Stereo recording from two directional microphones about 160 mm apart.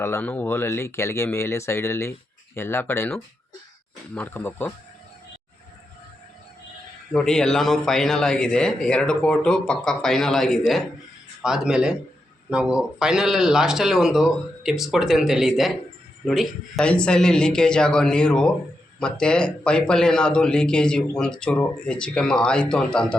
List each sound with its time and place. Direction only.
0.0 s speech: 10° left (ahead or behind)
7.1 s a man's voice: 5° left (ahead or behind)